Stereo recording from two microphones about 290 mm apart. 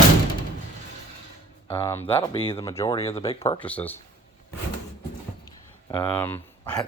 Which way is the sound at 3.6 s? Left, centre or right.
Centre.